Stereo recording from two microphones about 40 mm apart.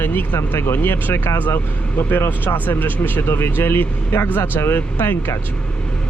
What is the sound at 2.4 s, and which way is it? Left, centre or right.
Speech, left.